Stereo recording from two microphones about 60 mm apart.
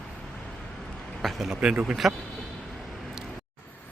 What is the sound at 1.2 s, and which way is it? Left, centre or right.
Speech, centre.